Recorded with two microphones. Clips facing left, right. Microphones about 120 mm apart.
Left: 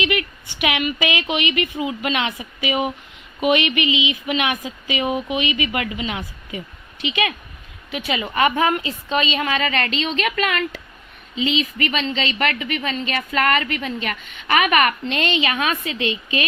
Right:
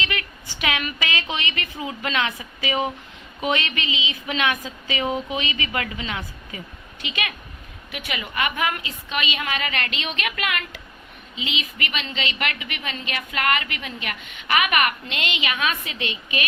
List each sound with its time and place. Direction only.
0.0 s a woman's voice: 20° left (ahead or behind)